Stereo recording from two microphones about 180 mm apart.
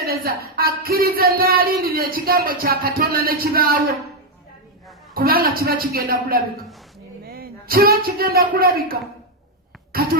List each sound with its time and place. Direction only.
0.0 s speech: 60° right (ahead or behind)
5.1 s speech: 55° right (ahead or behind)